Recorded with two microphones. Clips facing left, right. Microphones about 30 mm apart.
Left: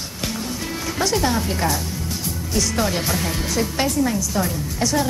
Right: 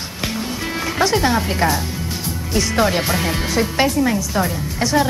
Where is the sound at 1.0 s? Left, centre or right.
Right.